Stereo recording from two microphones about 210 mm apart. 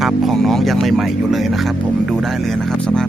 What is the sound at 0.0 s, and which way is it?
Speech, centre (ahead or behind).